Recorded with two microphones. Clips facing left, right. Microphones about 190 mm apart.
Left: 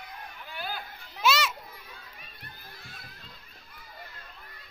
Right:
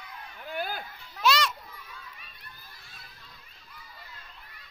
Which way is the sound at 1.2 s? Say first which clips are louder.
Right 1 dB; 5° left (ahead or behind).